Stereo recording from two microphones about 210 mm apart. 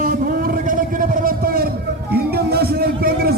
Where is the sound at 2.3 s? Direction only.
50° right (ahead or behind).